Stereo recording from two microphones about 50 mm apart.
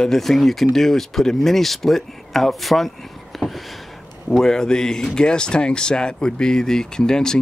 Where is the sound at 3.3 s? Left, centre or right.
Centre.